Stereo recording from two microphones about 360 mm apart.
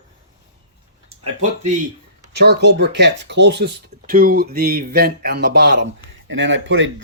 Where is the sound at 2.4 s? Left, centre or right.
Right.